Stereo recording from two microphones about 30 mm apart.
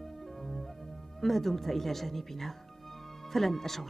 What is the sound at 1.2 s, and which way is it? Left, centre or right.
Speech, centre.